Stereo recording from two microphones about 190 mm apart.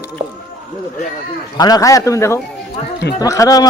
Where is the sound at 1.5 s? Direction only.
20° left (ahead or behind).